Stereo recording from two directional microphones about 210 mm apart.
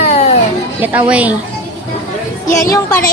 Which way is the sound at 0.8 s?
5° right (ahead or behind).